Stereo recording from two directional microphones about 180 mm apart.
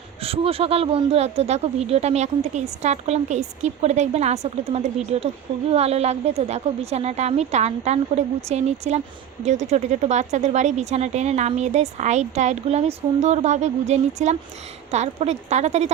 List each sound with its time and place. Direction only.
0.2 s speech: 30° right (ahead or behind)